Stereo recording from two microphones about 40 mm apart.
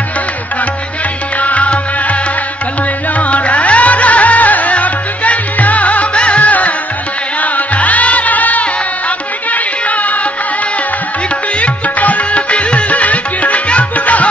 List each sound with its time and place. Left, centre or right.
1.4 s music: left
3.2 s music: left
11.6 s music: left